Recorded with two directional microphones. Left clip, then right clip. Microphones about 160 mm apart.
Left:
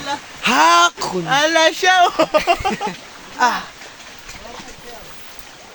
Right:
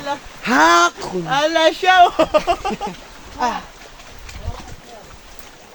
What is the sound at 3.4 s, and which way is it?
Speech, centre (ahead or behind).